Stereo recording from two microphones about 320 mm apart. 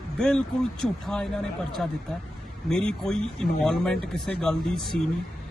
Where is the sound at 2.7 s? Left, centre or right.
Centre.